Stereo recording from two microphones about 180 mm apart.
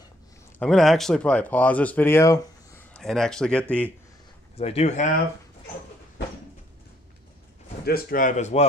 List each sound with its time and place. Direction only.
0.6 s speech: centre (ahead or behind)
2.9 s speech: centre (ahead or behind)
4.6 s speech: 35° left (ahead or behind)
7.8 s a man's voice: 55° left (ahead or behind)